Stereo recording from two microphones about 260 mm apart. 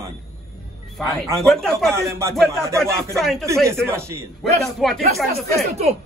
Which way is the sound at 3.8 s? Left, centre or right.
Centre.